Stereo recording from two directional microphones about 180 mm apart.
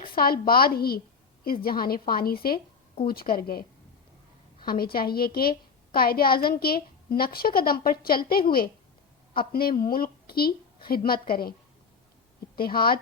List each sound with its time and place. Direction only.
0.1 s a woman's voice: 55° left (ahead or behind)
12.5 s a woman's voice: 55° left (ahead or behind)